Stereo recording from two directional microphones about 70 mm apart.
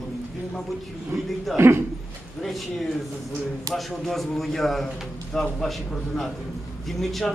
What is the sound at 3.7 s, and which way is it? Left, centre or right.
A man's voice, centre.